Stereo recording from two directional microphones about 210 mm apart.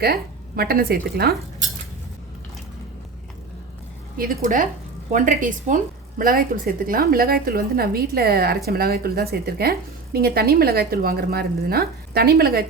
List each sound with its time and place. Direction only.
0.0 s a woman's voice: 50° right (ahead or behind)
4.2 s a woman's voice: 40° right (ahead or behind)